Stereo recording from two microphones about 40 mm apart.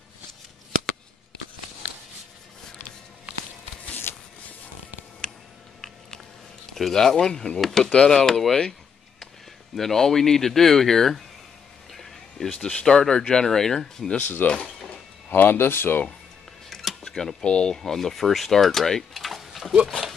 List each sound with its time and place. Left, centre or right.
4.1 s a sound: left
6.7 s speech: centre
7.8 s speech: left
8.1 s speech: centre
9.8 s speech: centre
11.9 s a sound: centre
12.8 s speech: centre
14.2 s speech: left
15.5 s speech: left
16.6 s a sound: centre
17.4 s speech: left
17.7 s speech: centre
19.1 s a sound: centre